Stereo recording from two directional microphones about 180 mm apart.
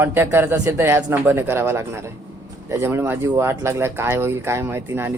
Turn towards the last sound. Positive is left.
turn(degrees=-15)  # may be behind; listen again after turning